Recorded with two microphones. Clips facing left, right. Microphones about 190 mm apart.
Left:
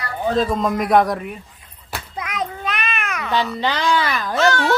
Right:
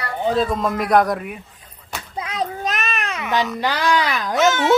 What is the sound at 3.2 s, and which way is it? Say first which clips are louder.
A woman's voice: even; 15° right (ahead or behind).